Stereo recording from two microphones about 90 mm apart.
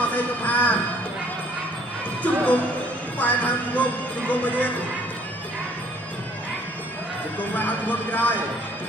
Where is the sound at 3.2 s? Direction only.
15° left (ahead or behind).